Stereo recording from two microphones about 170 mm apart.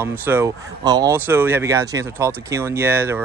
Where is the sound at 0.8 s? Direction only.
25° right (ahead or behind).